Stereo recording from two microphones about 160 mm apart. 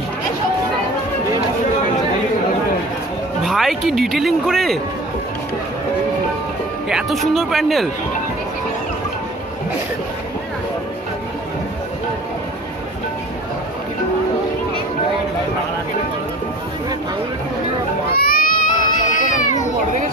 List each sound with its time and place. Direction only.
3.4 s speech: centre (ahead or behind)
6.9 s speech: centre (ahead or behind)
18.1 s baby cry: 65° left (ahead or behind)